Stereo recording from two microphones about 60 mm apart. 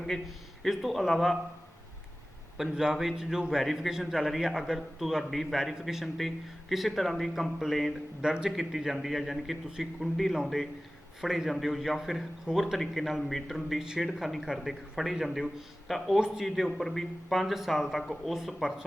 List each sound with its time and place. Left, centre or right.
0.0 s a man's voice: centre
2.7 s a man's voice: centre
8.2 s a man's voice: centre
16.6 s a man's voice: centre